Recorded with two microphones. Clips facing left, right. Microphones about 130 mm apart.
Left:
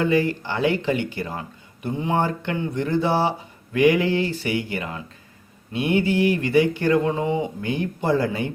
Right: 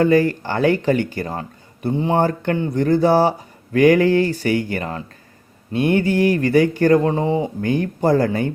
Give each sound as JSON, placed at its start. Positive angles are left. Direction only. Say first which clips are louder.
{"t": 0.0, "sound": "speech", "louder": "right 5 dB", "side_deg": -45}